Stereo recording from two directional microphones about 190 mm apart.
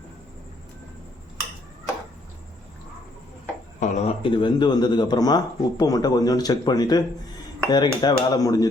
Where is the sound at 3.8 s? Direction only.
35° left (ahead or behind).